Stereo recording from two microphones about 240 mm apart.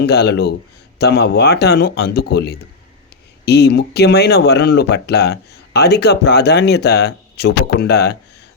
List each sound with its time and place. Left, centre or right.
0.0 s speech: left